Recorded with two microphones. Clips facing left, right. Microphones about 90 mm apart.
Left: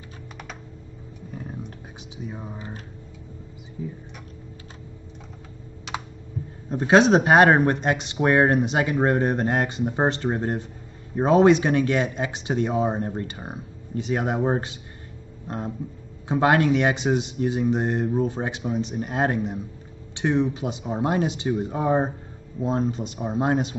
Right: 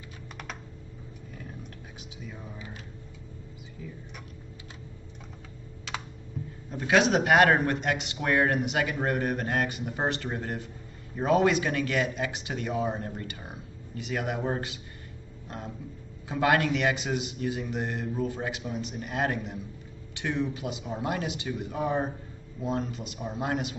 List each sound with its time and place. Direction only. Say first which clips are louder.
1.3 s a sound: left 8 dB; 30° left (ahead or behind)
2.2 s speech: left 7 dB; 30° left (ahead or behind)
3.8 s speech: left 9 dB; 25° left (ahead or behind)
6.7 s speech: left 7 dB; 35° left (ahead or behind)
15.4 s a sound: left 8 dB; 30° left (ahead or behind)
16.3 s speech: left 5 dB; 25° left (ahead or behind)